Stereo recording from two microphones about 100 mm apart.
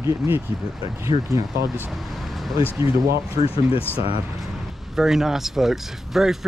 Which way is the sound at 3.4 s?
75° left (ahead or behind).